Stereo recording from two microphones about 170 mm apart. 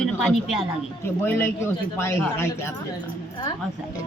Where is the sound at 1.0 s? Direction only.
15° left (ahead or behind).